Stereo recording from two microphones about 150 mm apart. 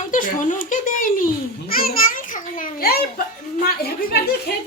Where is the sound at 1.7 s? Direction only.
75° left (ahead or behind).